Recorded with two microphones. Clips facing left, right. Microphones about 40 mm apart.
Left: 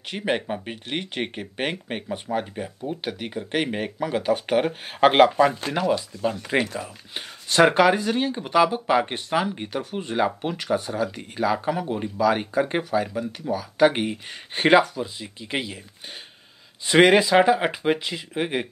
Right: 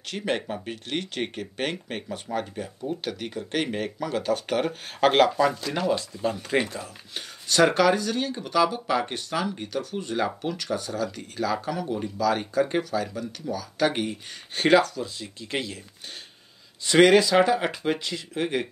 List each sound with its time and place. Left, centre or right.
0.1 s speech: centre
5.8 s speech: centre
6.8 s speech: left
16.8 s speech: left